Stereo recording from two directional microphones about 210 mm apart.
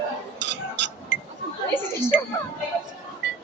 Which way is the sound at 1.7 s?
10° left (ahead or behind).